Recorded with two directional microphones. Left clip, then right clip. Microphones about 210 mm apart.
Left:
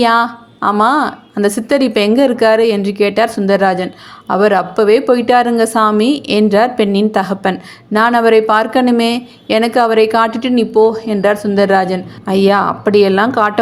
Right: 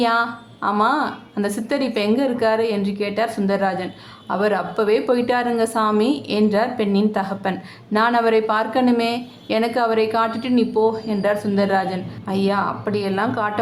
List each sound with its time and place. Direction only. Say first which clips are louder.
0.0 s a woman's voice: left 7 dB; 30° left (ahead or behind)